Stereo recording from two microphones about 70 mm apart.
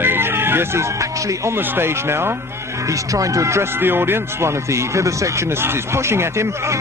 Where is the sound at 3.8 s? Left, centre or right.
Right.